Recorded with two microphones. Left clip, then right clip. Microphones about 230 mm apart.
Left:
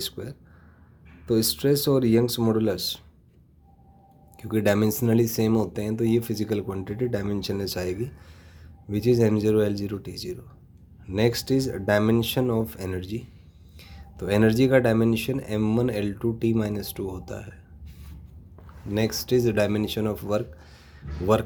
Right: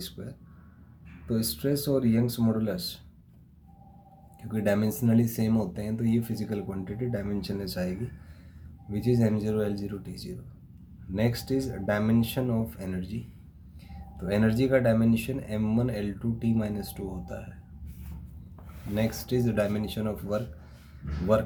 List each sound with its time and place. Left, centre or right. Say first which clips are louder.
0.0 s speech: left 8 dB; left
4.4 s speech: left 5 dB; left
14.3 s speech: left 5 dB; left
18.9 s speech: left 6 dB; left